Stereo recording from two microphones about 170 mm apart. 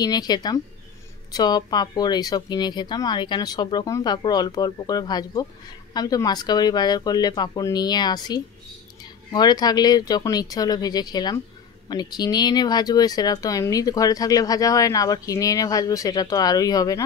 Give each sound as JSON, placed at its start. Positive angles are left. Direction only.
{"t": 0.0, "sound": "speech", "side_deg": 25}